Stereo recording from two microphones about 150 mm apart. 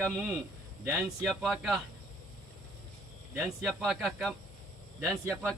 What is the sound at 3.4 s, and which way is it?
Speech, 5° right (ahead or behind).